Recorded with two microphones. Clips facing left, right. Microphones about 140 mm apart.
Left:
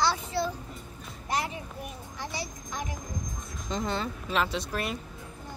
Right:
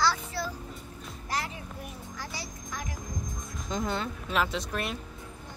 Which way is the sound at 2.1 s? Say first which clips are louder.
Left 5 dB; 25° left (ahead or behind).